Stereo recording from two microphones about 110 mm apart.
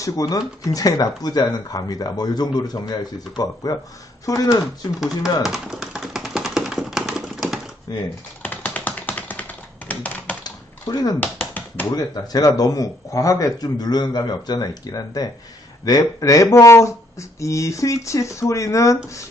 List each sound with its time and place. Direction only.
0.0 s speech: 30° left (ahead or behind)
4.6 s speech: centre (ahead or behind)
5.4 s tap: 5° right (ahead or behind)
7.9 s speech: 35° left (ahead or behind)
8.4 s typing: 15° left (ahead or behind)
10.4 s typing: 35° left (ahead or behind)
11.2 s tap: 15° left (ahead or behind)
11.9 s speech: 35° left (ahead or behind)